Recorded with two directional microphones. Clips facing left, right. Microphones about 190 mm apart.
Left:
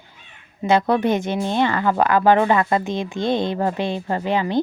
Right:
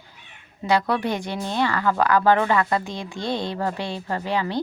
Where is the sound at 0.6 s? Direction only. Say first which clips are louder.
Left 4 dB; 20° left (ahead or behind).